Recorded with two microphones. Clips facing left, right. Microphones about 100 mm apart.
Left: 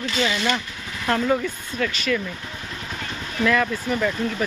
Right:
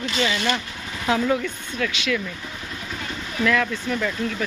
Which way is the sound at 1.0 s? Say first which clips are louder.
Even; 5° right (ahead or behind).